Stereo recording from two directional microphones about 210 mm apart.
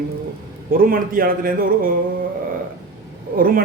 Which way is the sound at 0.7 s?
45° right (ahead or behind).